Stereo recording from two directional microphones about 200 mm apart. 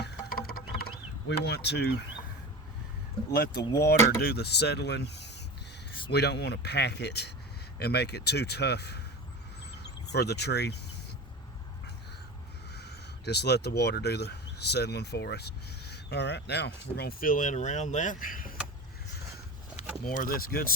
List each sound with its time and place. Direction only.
0.0 s music: 50° left (ahead or behind)
1.3 s speech: 55° left (ahead or behind)
3.3 s speech: 55° left (ahead or behind)
12.7 s speech: 55° left (ahead or behind)
20.1 s speech: 45° left (ahead or behind)